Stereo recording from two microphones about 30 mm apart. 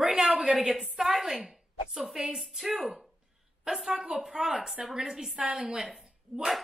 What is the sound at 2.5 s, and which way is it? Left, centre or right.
A woman's voice, centre.